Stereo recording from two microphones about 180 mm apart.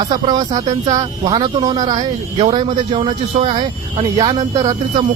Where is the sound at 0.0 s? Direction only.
20° right (ahead or behind).